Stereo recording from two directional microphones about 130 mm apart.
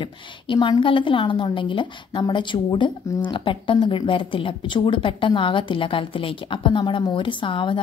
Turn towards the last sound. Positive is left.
turn(degrees=40)  # may be behind; listen again after turning